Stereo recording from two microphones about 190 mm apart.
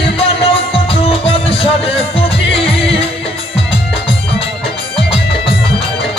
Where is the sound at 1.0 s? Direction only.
30° left (ahead or behind).